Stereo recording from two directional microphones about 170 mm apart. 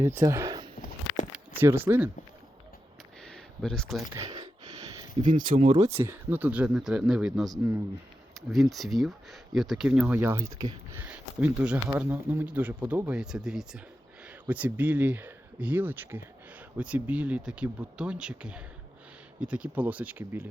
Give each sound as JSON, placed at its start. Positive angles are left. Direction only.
{"t": 0.0, "sound": "speech", "side_deg": -15}
{"t": 3.2, "sound": "a sound", "side_deg": 5}
{"t": 4.1, "sound": "a sound", "side_deg": -20}
{"t": 5.3, "sound": "speech", "side_deg": -50}
{"t": 5.9, "sound": "speech", "side_deg": -15}
{"t": 11.0, "sound": "speech", "side_deg": -10}